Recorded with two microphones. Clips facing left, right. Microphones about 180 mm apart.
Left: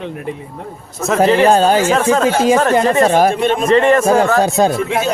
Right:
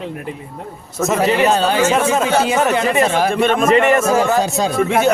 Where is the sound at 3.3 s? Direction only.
55° right (ahead or behind).